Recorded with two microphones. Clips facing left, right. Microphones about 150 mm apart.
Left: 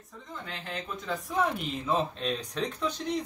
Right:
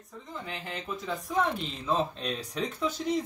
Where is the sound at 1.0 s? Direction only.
5° left (ahead or behind).